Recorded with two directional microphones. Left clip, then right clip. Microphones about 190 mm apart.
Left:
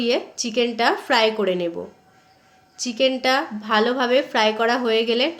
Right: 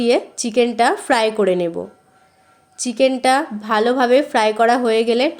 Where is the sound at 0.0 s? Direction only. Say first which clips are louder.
Right 5 dB; 40° right (ahead or behind).